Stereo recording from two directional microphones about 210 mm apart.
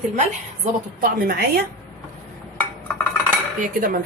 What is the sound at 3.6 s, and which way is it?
Speech, 40° right (ahead or behind).